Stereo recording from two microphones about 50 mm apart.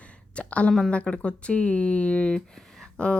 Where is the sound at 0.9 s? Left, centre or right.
Left.